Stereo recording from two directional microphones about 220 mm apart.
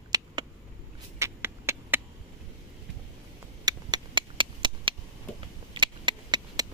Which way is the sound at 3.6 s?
20° right (ahead or behind).